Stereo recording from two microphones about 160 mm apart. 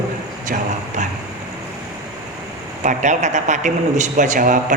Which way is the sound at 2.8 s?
50° right (ahead or behind).